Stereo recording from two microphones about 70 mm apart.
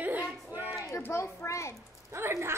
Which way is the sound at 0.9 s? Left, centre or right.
Left.